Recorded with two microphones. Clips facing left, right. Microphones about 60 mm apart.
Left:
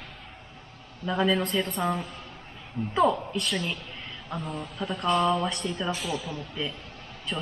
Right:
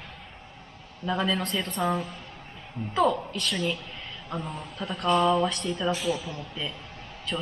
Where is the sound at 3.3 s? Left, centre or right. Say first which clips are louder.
Right 1 dB; centre.